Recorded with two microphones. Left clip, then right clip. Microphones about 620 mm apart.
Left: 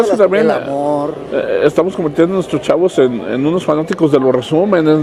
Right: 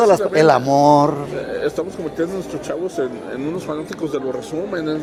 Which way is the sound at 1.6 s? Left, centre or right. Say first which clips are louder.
Left 10 dB; left.